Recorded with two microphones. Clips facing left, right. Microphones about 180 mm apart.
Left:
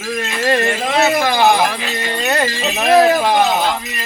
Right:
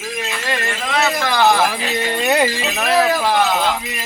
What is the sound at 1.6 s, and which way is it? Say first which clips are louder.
Speech: even; 5° right (ahead or behind).